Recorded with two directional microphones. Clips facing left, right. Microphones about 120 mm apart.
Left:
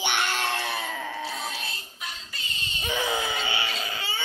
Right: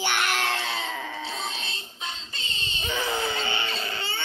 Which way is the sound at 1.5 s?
25° right (ahead or behind).